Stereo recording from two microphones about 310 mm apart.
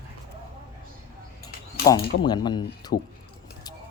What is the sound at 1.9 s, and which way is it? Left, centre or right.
Speech, centre.